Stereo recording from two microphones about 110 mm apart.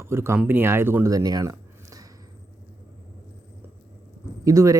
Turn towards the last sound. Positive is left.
turn(degrees=-30)  # may be behind; listen again after turning